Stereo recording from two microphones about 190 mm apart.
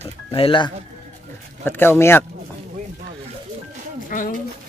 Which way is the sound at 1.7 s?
10° left (ahead or behind).